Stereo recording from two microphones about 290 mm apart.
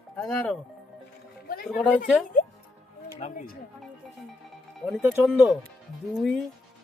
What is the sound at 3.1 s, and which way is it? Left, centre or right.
Speech, left.